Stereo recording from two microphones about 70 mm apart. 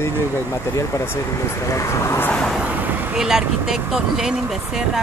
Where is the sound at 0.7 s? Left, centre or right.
Left.